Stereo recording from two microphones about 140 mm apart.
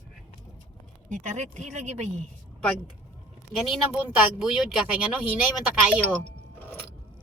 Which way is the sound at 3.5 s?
Centre (ahead or behind).